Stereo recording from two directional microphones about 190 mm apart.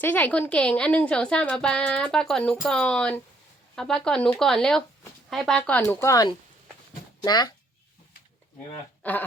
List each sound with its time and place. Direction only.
0.0 s a woman's voice: 10° left (ahead or behind)
9.0 s speech: 10° left (ahead or behind)